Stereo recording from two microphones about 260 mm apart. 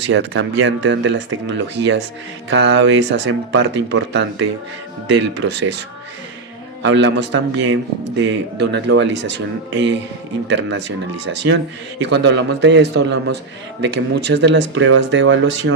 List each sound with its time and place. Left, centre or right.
0.1 s a man's voice: right
6.8 s a man's voice: right